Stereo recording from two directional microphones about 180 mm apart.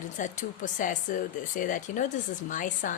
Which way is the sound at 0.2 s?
45° left (ahead or behind).